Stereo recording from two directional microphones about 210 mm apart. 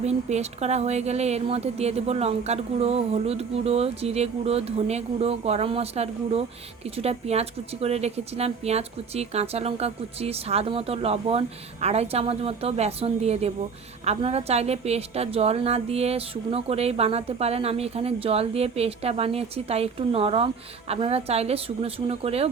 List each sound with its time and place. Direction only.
0.0 s a woman's voice: 30° right (ahead or behind)